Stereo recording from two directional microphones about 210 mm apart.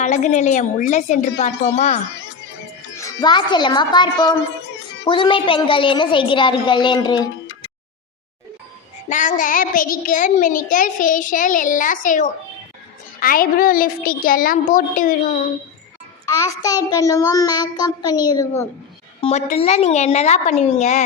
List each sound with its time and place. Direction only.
0.0 s a child's voice: 35° left (ahead or behind)
3.0 s a woman's voice: 20° left (ahead or behind)
9.0 s a child's voice: 35° left (ahead or behind)
16.2 s child singing: 15° left (ahead or behind)
19.2 s a child's voice: 30° left (ahead or behind)